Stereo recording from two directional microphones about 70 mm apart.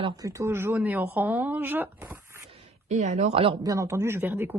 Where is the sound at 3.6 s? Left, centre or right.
Right.